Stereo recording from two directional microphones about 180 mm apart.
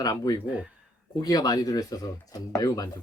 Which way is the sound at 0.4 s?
5° right (ahead or behind).